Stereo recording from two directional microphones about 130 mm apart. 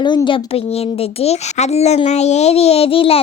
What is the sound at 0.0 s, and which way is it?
Speech, 40° left (ahead or behind).